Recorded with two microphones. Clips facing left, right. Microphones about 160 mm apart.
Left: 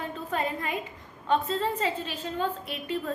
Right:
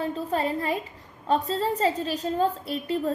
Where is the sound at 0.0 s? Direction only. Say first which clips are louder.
Right 4 dB; 35° right (ahead or behind).